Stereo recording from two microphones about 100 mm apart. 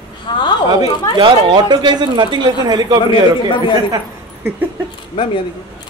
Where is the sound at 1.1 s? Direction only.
45° right (ahead or behind).